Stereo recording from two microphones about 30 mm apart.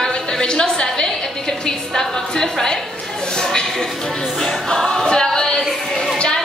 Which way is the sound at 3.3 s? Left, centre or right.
Left.